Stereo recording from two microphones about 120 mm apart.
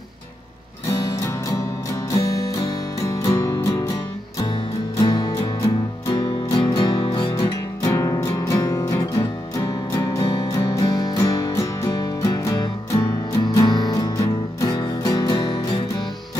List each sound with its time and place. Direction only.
3.2 s music: 25° left (ahead or behind)